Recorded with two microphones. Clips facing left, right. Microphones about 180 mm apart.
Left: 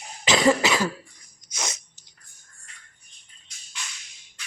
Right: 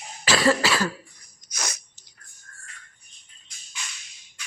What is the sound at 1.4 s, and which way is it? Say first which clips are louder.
Sneeze: left 1 dB; 20° left (ahead or behind).